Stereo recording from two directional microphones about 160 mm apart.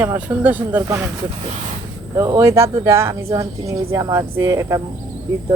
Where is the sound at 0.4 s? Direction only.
10° right (ahead or behind).